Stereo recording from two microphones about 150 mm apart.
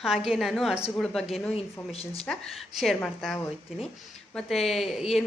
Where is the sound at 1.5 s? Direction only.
40° left (ahead or behind).